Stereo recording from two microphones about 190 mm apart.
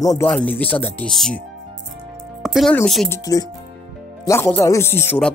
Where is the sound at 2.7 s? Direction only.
5° left (ahead or behind).